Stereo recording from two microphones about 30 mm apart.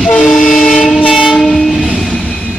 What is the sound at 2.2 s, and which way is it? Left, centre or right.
Vehicle, left.